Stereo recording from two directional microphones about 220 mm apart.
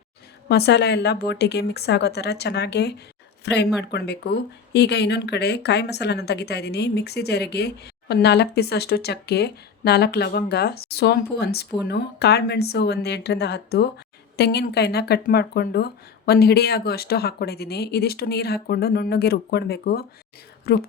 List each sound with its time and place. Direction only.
0.4 s speech: 50° left (ahead or behind)